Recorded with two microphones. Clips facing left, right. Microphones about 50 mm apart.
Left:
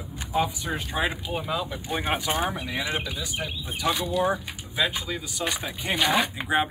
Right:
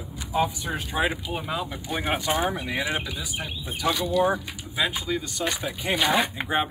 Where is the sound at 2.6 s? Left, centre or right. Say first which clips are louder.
Right 1 dB; right.